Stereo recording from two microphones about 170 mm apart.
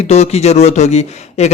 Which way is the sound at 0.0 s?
40° left (ahead or behind).